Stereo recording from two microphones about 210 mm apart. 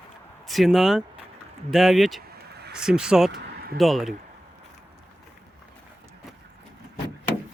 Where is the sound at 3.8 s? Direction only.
Centre (ahead or behind).